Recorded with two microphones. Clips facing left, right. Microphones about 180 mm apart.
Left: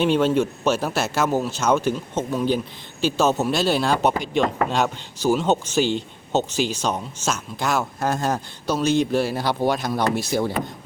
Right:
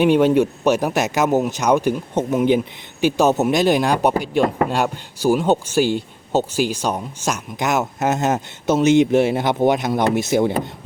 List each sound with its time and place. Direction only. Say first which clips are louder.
0.0 s a man's voice: right 4 dB; 15° right (ahead or behind)